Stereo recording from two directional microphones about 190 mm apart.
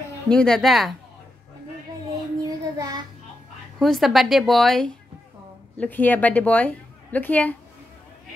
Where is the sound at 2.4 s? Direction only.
20° right (ahead or behind).